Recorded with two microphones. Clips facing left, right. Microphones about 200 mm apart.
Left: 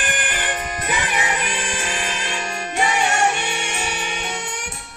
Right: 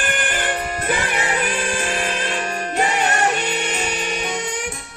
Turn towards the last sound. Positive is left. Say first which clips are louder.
# right 1 dB
turn(degrees=10)  # may be behind; listen again after turning